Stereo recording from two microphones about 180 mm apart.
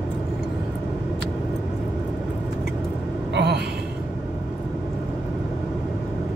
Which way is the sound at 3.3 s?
65° right (ahead or behind).